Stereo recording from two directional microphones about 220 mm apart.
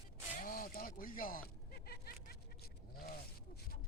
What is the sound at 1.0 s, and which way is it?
Vehicle, 40° left (ahead or behind).